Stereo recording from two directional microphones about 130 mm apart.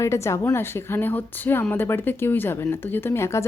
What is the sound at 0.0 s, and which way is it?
A woman's voice, 20° left (ahead or behind).